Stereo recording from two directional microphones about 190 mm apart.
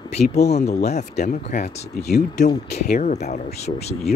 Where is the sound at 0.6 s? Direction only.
35° left (ahead or behind).